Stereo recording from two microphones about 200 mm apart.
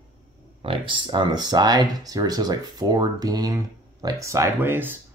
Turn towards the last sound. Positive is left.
turn(degrees=-10)  # may be behind; listen again after turning